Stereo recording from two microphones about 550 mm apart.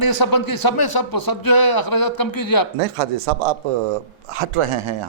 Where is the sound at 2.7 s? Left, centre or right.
Right.